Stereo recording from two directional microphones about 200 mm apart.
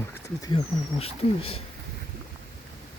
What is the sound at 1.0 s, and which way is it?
Speech, 30° left (ahead or behind).